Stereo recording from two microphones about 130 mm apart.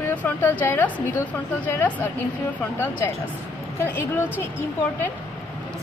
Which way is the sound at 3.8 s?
20° left (ahead or behind).